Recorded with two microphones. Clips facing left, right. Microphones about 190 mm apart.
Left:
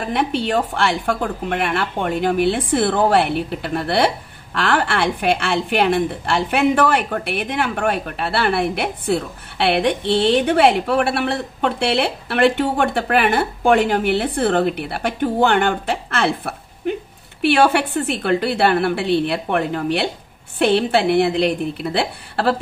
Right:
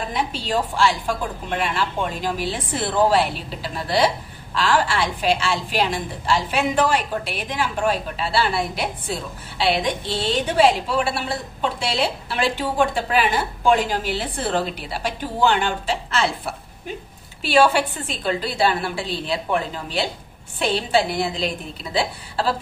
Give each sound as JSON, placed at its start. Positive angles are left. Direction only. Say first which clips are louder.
{"t": 0.1, "sound": "a woman's voice", "louder": "left 7 dB", "side_deg": 60}